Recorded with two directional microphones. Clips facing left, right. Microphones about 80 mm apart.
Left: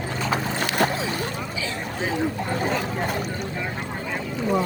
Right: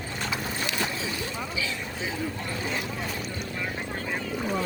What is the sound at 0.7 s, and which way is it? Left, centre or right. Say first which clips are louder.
Boat: left 7 dB; left.